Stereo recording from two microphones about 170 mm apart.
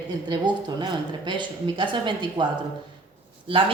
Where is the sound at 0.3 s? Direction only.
25° right (ahead or behind).